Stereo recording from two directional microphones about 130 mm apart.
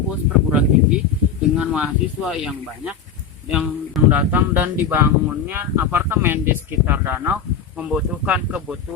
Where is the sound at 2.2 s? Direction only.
5° right (ahead or behind).